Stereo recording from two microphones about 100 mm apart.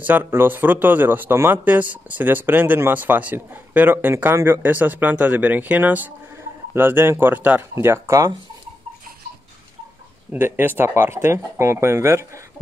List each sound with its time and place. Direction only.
0.0 s speech: 20° right (ahead or behind)
7.7 s speech: 30° right (ahead or behind)
10.3 s speech: 20° right (ahead or behind)